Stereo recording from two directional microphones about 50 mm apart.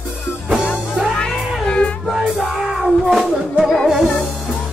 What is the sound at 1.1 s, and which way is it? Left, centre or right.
Cat, centre.